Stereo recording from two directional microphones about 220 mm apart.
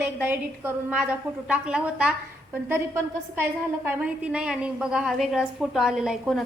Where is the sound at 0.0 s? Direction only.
10° right (ahead or behind).